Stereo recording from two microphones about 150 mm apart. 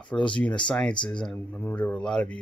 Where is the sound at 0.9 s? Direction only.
30° left (ahead or behind).